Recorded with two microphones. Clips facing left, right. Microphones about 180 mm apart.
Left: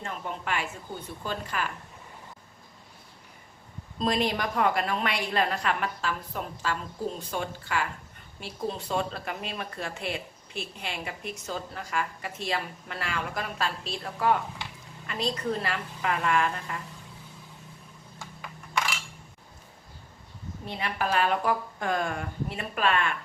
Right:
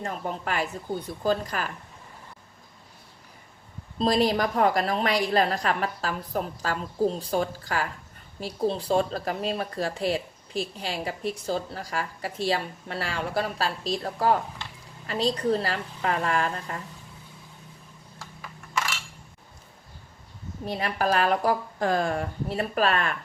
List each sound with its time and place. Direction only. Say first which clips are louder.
0.0 s speech: right 4 dB; 40° right (ahead or behind)
3.9 s speech: right 4 dB; 35° right (ahead or behind)
18.2 s coin: even; centre (ahead or behind)
20.7 s speech: right 4 dB; 40° right (ahead or behind)